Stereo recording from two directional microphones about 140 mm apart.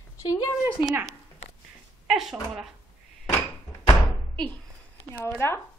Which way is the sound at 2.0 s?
Centre (ahead or behind).